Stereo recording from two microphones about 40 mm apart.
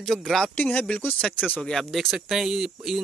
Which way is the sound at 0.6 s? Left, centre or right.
Left.